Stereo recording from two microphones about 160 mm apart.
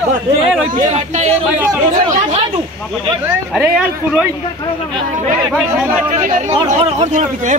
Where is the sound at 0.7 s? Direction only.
50° right (ahead or behind).